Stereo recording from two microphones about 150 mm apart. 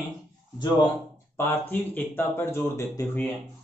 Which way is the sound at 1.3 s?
15° left (ahead or behind).